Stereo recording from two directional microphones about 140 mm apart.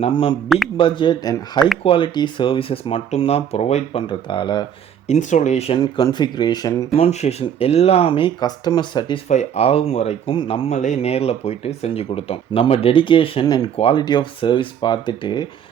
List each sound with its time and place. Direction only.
0.0 s speech: 40° left (ahead or behind)
4.0 s speech: 35° left (ahead or behind)
5.0 s speech: 60° left (ahead or behind)
5.7 s speech: 30° left (ahead or behind)
6.9 s speech: 50° left (ahead or behind); by 9.2 s 35° left (ahead or behind)
9.3 s speech: 50° left (ahead or behind)
10.3 s speech: 40° left (ahead or behind)
10.8 s speech: 55° left (ahead or behind); by 15.4 s 35° left (ahead or behind)